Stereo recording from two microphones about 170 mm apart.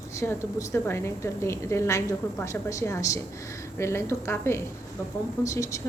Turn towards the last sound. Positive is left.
turn(degrees=20)  # may be behind; listen again after turning